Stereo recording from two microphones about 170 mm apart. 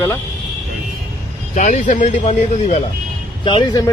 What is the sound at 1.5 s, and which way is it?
Speech, 45° left (ahead or behind).